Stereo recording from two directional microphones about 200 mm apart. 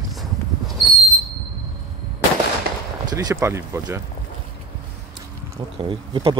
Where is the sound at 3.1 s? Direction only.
20° right (ahead or behind).